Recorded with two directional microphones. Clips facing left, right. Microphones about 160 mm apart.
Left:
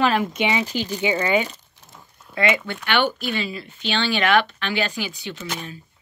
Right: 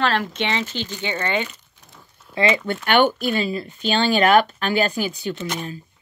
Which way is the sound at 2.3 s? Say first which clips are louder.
Right 1 dB; 30° right (ahead or behind).